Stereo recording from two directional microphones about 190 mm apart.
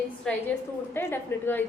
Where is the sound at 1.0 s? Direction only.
10° left (ahead or behind).